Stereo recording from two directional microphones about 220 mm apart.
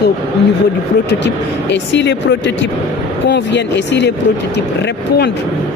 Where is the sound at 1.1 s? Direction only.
55° left (ahead or behind).